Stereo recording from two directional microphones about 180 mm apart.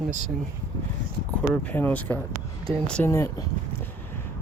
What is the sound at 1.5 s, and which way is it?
Speech, 10° left (ahead or behind).